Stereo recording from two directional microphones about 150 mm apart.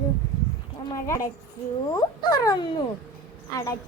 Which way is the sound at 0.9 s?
20° left (ahead or behind).